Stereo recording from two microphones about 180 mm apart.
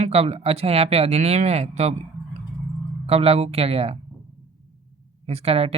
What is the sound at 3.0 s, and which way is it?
Speech, 35° right (ahead or behind).